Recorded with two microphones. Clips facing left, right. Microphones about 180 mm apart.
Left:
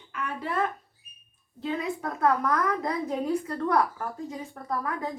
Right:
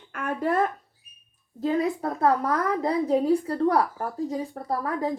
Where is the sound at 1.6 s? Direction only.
40° right (ahead or behind).